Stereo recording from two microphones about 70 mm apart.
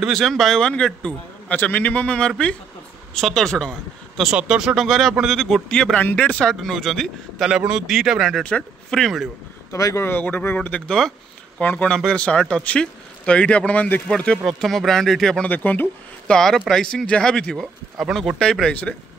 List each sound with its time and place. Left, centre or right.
0.1 s speech: centre
4.2 s speech: centre
4.8 s a man's voice: centre
5.7 s speech: centre
6.5 s a man's voice: centre
9.7 s speech: left
10.0 s speech: left
10.9 s a sound: centre
11.6 s speech: centre
14.0 s a man's voice: centre
15.4 s speech: left
16.3 s speech: centre